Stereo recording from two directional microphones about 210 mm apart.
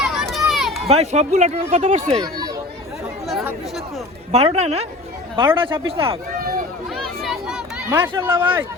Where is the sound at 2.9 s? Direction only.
Centre (ahead or behind).